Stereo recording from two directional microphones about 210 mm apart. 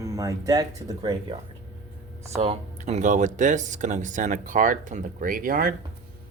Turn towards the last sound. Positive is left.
turn(degrees=-40)  # may be behind; listen again after turning